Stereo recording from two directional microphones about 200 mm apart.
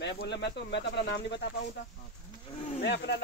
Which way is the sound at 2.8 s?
55° left (ahead or behind).